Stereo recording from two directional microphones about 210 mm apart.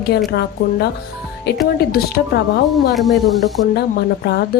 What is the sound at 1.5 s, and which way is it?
Speech, 55° left (ahead or behind).